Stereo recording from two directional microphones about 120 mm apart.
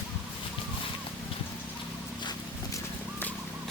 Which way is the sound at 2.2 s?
35° left (ahead or behind).